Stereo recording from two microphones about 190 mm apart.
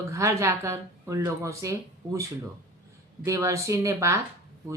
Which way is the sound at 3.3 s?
15° right (ahead or behind).